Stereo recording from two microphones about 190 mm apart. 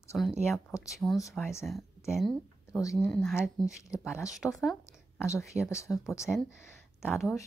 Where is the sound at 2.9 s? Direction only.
Centre (ahead or behind).